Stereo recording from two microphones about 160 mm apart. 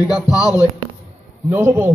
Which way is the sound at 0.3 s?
20° left (ahead or behind).